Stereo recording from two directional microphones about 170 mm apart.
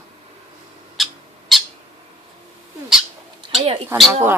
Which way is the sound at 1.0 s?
Centre (ahead or behind).